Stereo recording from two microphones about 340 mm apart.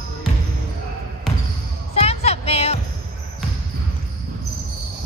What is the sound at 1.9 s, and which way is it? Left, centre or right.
Music, centre.